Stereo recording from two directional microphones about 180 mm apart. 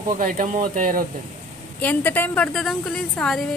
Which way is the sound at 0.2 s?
50° right (ahead or behind).